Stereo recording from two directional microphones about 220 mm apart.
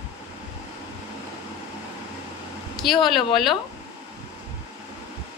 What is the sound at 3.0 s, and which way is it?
Speech, centre (ahead or behind).